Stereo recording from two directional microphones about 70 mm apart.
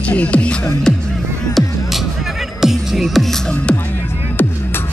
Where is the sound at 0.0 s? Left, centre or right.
Centre.